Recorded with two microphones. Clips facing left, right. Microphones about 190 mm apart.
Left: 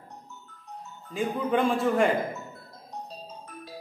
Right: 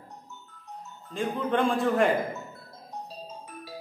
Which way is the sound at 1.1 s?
5° left (ahead or behind).